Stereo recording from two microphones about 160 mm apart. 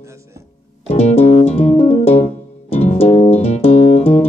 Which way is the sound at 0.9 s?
40° left (ahead or behind).